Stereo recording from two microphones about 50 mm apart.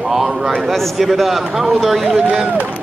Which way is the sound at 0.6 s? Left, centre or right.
Centre.